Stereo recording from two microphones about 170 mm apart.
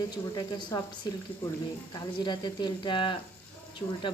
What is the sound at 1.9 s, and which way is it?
Speech, 25° left (ahead or behind).